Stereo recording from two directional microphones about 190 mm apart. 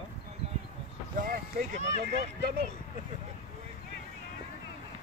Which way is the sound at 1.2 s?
45° right (ahead or behind).